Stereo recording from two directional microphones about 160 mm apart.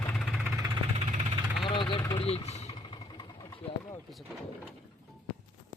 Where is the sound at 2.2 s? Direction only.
40° left (ahead or behind).